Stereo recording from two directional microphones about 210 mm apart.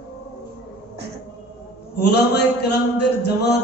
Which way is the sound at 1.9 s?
50° left (ahead or behind).